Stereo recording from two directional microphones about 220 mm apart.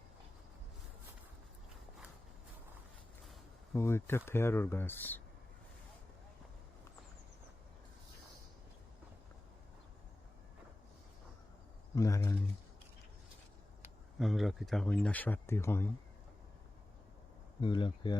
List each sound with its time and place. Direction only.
3.8 s speech: 10° left (ahead or behind)
11.9 s speech: 15° left (ahead or behind)
14.2 s speech: centre (ahead or behind)
17.6 s speech: 20° left (ahead or behind)